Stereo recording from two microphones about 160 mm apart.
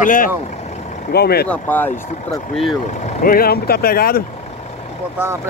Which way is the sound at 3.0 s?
55° left (ahead or behind).